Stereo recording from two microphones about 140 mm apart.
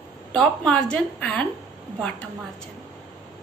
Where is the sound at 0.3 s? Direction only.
5° left (ahead or behind).